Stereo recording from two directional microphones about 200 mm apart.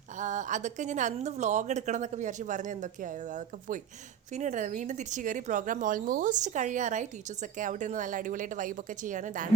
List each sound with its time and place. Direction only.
0.2 s a woman's voice: 40° right (ahead or behind)